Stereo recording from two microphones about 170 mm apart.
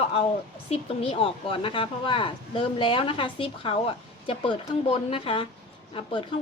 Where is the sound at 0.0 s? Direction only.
35° left (ahead or behind).